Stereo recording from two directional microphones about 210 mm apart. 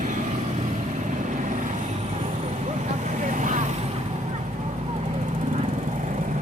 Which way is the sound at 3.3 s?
35° right (ahead or behind).